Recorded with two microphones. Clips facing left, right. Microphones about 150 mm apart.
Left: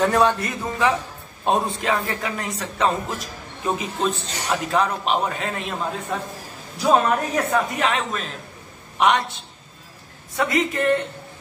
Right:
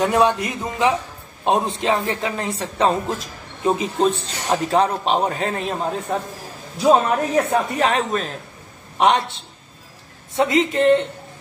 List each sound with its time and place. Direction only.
0.0 s a man's voice: 15° right (ahead or behind)
10.3 s a man's voice: 25° right (ahead or behind)